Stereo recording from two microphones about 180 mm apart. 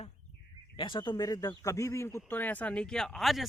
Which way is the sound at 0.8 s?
25° left (ahead or behind).